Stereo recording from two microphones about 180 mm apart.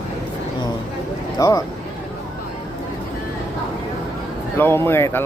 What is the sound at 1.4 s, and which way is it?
Speech, 20° left (ahead or behind).